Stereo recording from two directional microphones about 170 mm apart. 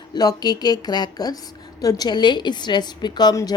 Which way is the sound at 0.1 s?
25° left (ahead or behind).